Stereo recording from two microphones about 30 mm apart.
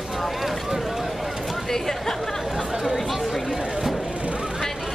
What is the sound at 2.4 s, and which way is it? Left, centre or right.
Chatter, centre.